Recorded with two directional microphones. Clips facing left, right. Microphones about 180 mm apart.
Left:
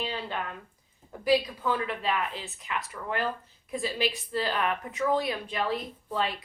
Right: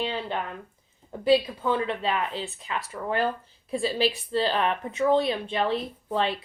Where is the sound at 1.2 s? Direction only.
25° right (ahead or behind).